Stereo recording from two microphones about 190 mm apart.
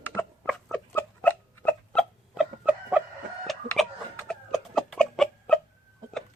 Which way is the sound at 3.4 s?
Centre (ahead or behind).